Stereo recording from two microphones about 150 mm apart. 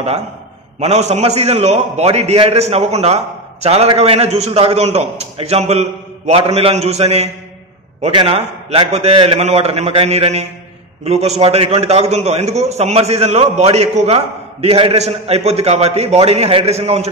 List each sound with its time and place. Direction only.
0.7 s a man's voice: 45° right (ahead or behind)